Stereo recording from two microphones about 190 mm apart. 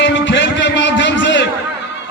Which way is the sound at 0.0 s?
70° left (ahead or behind).